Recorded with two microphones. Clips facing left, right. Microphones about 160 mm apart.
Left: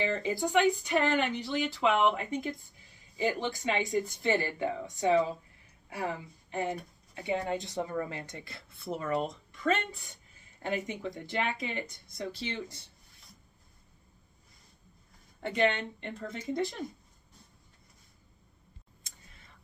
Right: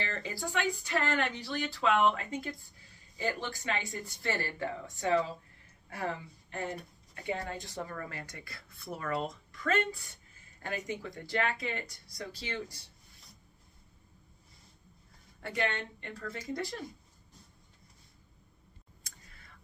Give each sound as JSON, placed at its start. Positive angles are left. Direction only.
{"t": 0.0, "sound": "speech", "side_deg": 15}
{"t": 15.4, "sound": "speech", "side_deg": 20}